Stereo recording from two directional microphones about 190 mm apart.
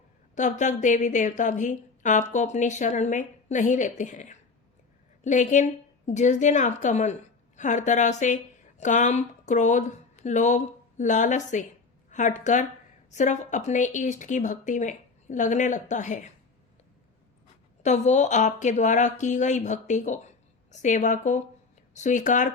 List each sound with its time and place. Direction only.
0.3 s a woman's voice: 40° left (ahead or behind)
17.8 s a woman's voice: 40° left (ahead or behind)